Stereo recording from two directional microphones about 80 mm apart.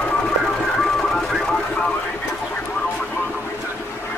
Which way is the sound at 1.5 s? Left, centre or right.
Centre.